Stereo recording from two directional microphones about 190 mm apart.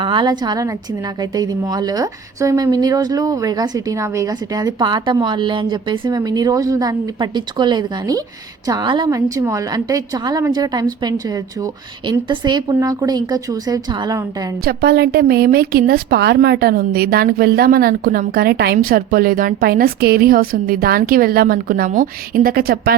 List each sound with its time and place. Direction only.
0.0 s a woman's voice: 25° right (ahead or behind)
14.6 s a woman's voice: 55° right (ahead or behind)